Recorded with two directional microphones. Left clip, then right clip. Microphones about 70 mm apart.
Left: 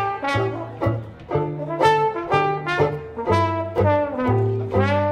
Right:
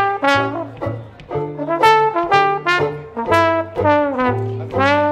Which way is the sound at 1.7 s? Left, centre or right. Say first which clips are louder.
Right 6 dB; left.